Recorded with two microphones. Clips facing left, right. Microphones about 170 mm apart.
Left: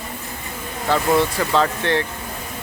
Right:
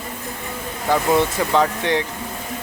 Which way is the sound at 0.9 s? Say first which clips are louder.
Even; 10° right (ahead or behind).